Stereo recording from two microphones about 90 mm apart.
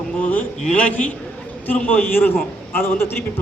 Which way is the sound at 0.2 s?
15° left (ahead or behind).